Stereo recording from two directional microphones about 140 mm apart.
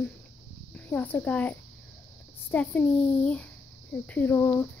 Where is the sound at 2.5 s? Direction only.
10° left (ahead or behind).